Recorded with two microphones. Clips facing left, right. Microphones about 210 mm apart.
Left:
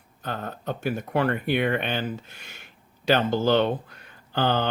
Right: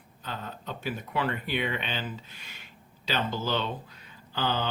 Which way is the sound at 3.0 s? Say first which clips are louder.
Left 9 dB; 60° left (ahead or behind).